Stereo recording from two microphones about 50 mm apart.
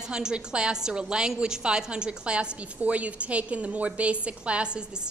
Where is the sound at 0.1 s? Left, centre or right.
Centre.